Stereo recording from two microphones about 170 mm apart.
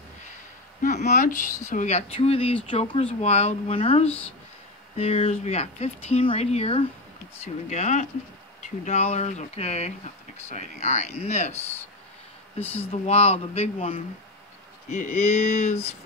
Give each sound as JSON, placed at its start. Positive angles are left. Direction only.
{"t": 0.8, "sound": "speech", "side_deg": 45}
{"t": 12.9, "sound": "speech", "side_deg": 35}